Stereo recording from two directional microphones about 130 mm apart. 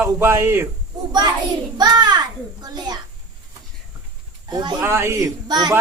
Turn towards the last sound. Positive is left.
turn(degrees=-30)  # may be behind; listen again after turning